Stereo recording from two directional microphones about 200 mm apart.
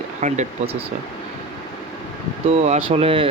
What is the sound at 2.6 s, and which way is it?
Speech, 30° right (ahead or behind).